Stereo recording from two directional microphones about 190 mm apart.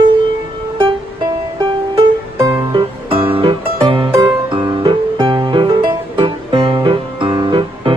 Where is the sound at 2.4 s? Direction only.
15° right (ahead or behind).